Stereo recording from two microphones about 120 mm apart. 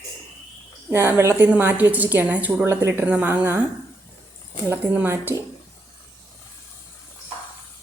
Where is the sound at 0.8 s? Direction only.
20° right (ahead or behind).